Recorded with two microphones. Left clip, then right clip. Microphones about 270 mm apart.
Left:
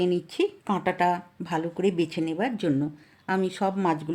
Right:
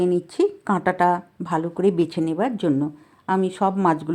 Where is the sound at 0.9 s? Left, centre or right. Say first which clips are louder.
Right 5 dB; centre.